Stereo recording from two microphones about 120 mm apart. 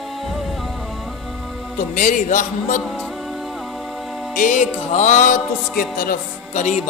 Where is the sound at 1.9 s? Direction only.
90° left.